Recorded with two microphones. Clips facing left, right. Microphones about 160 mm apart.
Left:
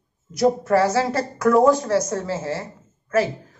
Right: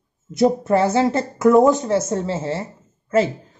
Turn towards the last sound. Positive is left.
turn(degrees=-25)  # may be behind; listen again after turning